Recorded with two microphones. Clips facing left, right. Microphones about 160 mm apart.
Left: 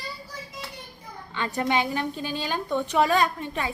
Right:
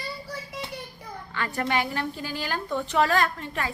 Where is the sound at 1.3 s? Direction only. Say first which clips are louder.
Left 2 dB; 20° left (ahead or behind).